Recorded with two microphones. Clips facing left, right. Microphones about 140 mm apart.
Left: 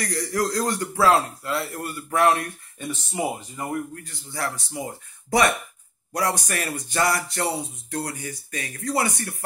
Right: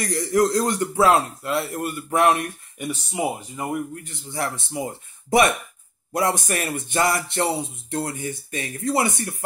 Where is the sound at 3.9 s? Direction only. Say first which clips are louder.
Right 4 dB; 20° right (ahead or behind).